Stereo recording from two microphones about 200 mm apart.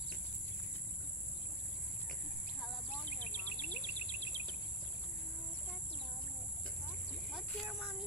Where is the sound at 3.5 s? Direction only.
35° left (ahead or behind).